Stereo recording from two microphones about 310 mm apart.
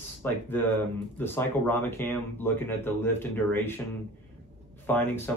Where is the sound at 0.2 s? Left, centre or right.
Centre.